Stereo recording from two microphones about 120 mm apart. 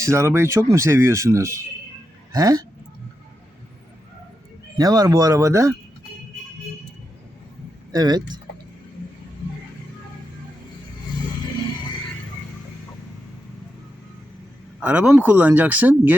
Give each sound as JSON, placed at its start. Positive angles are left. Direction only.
{"t": 0.0, "sound": "speech", "side_deg": -25}
{"t": 4.8, "sound": "speech", "side_deg": -30}
{"t": 7.9, "sound": "speech", "side_deg": -35}
{"t": 14.8, "sound": "speech", "side_deg": -10}